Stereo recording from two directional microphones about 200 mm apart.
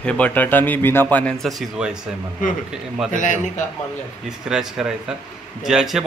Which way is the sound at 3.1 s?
40° left (ahead or behind).